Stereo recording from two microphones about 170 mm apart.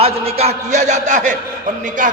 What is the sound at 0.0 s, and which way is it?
A man's voice, 35° right (ahead or behind).